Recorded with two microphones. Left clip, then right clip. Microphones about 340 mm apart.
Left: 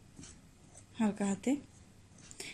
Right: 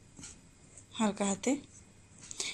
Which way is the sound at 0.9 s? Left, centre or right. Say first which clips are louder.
Right 3 dB; right.